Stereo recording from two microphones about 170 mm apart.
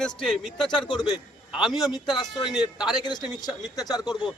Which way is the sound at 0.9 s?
25° left (ahead or behind).